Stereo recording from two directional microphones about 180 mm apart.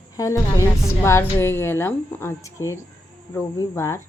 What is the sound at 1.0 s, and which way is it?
Speech, 15° left (ahead or behind).